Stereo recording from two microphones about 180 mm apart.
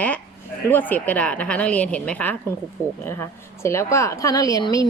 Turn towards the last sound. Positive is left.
turn(degrees=20)  # may be behind; listen again after turning